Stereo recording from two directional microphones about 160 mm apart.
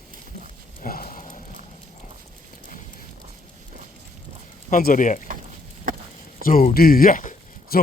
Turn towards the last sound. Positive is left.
turn(degrees=55)  # may be behind; listen again after turning